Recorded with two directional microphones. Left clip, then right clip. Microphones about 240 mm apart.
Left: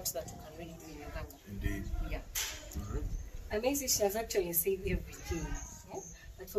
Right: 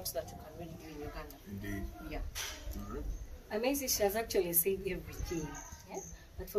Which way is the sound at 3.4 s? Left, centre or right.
Centre.